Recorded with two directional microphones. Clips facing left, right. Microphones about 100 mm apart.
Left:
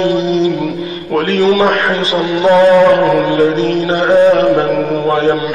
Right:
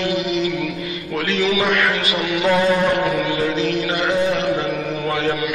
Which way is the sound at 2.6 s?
50° left (ahead or behind).